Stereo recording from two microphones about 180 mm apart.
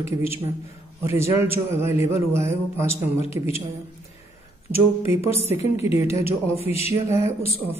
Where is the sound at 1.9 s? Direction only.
35° left (ahead or behind).